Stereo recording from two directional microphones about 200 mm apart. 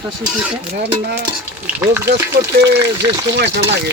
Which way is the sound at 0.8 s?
55° right (ahead or behind).